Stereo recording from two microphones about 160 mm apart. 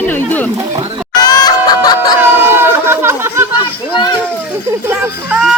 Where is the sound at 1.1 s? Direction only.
25° left (ahead or behind).